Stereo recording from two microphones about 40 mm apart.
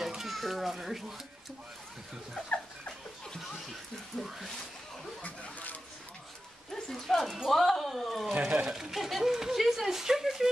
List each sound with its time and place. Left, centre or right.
0.0 s children playing: centre
5.2 s a sound: left
6.7 s speech: centre